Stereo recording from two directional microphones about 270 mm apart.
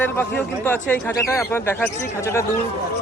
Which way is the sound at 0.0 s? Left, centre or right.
Centre.